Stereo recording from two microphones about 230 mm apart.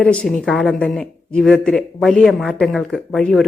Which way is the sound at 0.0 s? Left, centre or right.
Centre.